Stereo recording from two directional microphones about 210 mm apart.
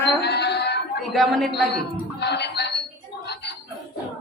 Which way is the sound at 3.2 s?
55° left (ahead or behind).